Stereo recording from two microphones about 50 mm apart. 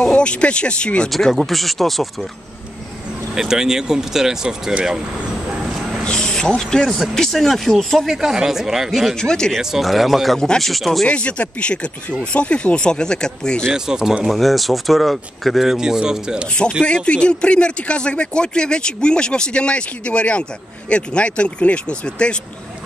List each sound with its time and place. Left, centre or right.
0.1 s speech: left
1.1 s speech: centre
3.3 s speech: centre
6.0 s speech: centre
9.1 s speech: centre
9.6 s speech: centre
11.1 s speech: left
13.7 s speech: centre
14.2 s speech: centre
16.8 s speech: left